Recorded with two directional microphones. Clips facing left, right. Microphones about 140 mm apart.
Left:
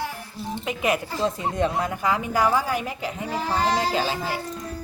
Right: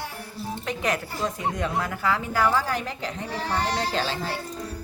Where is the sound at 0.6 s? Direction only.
10° left (ahead or behind).